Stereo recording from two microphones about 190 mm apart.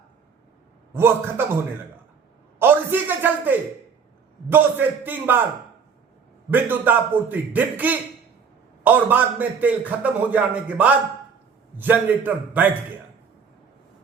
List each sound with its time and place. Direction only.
0.9 s a man's voice: 10° right (ahead or behind)
2.6 s a sound: 10° right (ahead or behind)
4.4 s a man's voice: 10° right (ahead or behind)
6.5 s a man's voice: 10° right (ahead or behind)